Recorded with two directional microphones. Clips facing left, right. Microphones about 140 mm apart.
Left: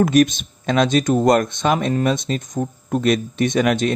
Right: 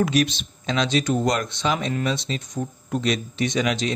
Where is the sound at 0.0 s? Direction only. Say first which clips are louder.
Left 6 dB; 50° left (ahead or behind).